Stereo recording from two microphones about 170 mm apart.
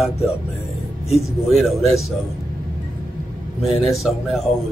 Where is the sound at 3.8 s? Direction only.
Centre (ahead or behind).